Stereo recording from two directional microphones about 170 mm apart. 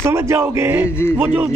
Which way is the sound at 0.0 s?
15° right (ahead or behind).